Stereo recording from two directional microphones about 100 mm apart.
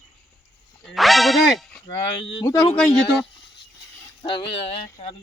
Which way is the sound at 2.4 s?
35° left (ahead or behind).